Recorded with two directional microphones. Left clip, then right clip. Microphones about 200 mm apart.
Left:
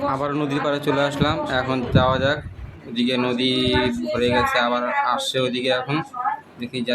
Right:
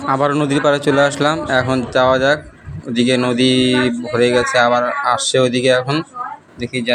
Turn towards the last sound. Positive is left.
turn(degrees=-25)  # may be behind; listen again after turning